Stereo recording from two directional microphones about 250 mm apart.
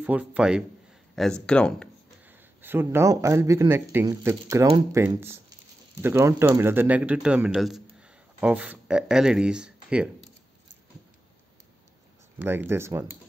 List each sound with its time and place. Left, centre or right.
0.0 s speech: centre
2.2 s a man's voice: centre
12.4 s a man's voice: centre